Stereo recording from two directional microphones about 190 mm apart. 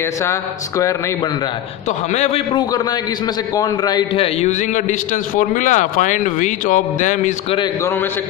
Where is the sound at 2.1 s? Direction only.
35° left (ahead or behind).